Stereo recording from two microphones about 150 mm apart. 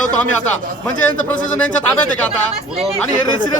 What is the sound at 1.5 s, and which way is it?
Speech, 10° left (ahead or behind).